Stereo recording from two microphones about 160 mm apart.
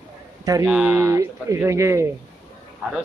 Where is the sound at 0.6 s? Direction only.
5° right (ahead or behind).